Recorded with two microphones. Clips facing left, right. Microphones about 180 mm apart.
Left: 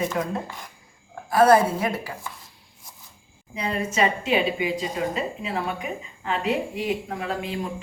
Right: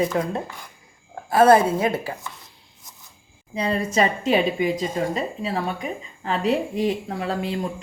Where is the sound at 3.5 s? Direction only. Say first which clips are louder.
Right 4 dB; 35° right (ahead or behind).